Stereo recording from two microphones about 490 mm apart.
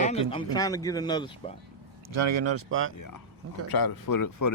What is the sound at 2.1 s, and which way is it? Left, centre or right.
Speech, right.